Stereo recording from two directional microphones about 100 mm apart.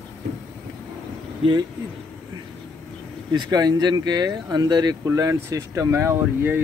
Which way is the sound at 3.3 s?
45° right (ahead or behind).